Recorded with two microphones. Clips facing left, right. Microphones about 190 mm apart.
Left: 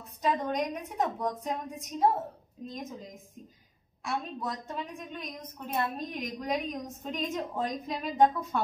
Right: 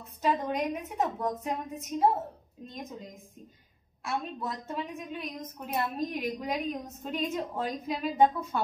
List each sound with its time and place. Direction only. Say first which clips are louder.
0.2 s a woman's voice: right 1 dB; centre (ahead or behind)